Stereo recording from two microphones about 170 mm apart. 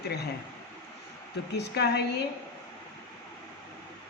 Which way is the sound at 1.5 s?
75° left (ahead or behind).